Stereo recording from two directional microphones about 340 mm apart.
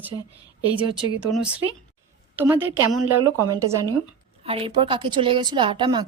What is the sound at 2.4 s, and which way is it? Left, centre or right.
Speech, centre.